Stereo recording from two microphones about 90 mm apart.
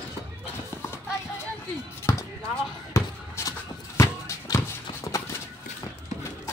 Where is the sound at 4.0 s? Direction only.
35° left (ahead or behind).